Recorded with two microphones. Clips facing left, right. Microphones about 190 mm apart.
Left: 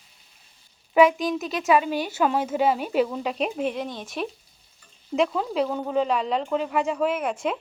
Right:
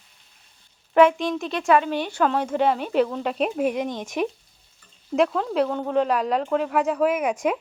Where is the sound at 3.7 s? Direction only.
15° right (ahead or behind).